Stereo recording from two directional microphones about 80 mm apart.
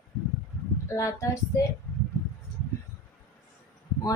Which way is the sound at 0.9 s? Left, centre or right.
Left.